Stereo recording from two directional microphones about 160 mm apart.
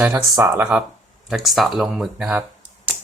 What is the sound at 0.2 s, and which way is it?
Speech, 20° right (ahead or behind).